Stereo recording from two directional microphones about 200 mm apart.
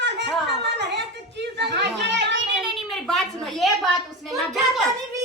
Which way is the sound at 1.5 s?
60° right (ahead or behind).